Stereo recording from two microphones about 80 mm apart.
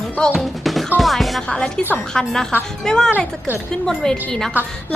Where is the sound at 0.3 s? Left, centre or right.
Centre.